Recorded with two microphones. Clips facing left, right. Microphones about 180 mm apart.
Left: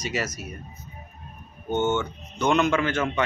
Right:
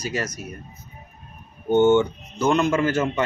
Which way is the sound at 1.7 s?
15° right (ahead or behind).